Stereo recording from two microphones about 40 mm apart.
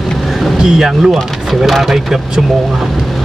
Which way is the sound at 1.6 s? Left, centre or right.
Centre.